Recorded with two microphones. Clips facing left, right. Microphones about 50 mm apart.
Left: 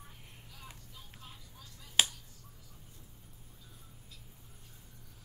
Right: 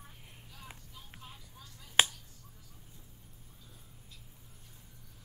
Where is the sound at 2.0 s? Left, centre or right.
Right.